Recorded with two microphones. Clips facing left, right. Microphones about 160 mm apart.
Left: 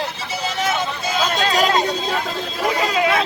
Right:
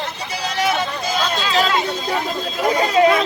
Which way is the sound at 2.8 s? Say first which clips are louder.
Right 6 dB; 35° right (ahead or behind).